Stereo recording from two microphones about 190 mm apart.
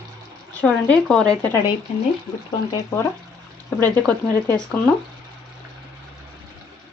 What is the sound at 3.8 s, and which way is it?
Speech, 10° left (ahead or behind).